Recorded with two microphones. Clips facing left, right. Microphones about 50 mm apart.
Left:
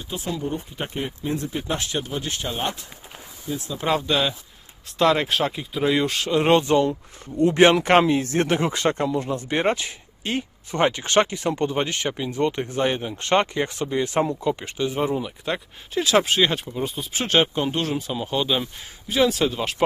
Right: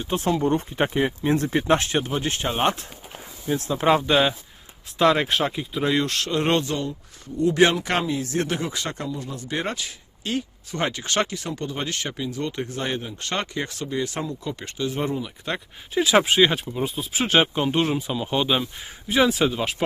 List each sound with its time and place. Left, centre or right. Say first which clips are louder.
0.4 s speech: right 7 dB; right
1.7 s speech: right 5 dB; right
3.4 s speech: right 4 dB; right
3.8 s speech: right 3 dB; right
4.9 s speech: even; centre
6.6 s speech: left 7 dB; left
14.8 s speech: left 2 dB; centre
19.3 s speech: right 1 dB; centre